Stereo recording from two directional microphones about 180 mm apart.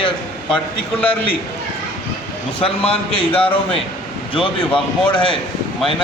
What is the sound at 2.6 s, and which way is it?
A man's voice, 30° left (ahead or behind).